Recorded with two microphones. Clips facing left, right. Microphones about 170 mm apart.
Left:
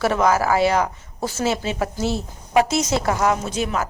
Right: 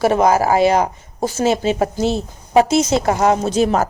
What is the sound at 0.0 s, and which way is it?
Speech, 15° right (ahead or behind).